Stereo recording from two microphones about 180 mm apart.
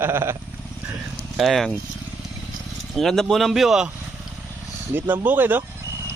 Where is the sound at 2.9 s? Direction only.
Centre (ahead or behind).